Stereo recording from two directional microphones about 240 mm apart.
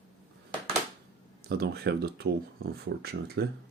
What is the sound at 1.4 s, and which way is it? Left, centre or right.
Speech, right.